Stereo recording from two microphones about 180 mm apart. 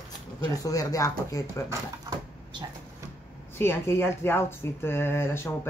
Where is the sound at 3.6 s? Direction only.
15° left (ahead or behind).